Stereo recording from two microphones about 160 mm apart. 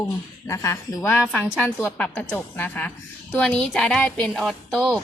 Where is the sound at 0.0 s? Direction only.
20° left (ahead or behind).